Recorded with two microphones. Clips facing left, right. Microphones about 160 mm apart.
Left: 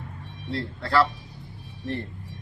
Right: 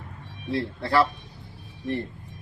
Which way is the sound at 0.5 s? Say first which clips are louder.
Right 1 dB; 25° right (ahead or behind).